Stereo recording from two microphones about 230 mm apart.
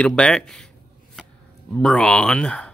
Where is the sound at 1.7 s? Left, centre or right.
Centre.